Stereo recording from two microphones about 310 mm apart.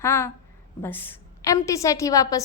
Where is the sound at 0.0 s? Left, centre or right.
Centre.